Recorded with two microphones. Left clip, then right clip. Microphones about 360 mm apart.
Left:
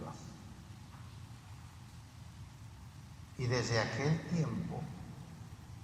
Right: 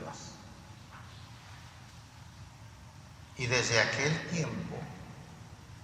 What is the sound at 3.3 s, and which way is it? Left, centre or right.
A man's voice, right.